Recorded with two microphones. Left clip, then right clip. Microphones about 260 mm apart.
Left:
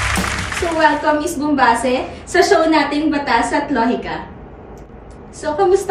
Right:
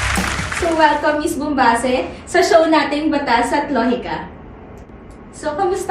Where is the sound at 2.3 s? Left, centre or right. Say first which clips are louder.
Even; centre.